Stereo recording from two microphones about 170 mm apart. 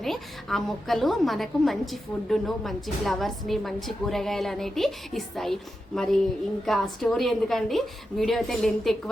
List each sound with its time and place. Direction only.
0.0 s a woman's voice: centre (ahead or behind)